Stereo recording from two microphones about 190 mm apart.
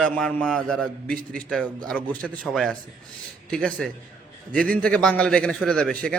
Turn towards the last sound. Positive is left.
turn(degrees=5)  # may be behind; listen again after turning